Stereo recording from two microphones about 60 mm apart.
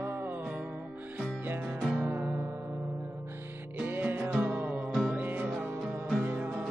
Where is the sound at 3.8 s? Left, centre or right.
Right.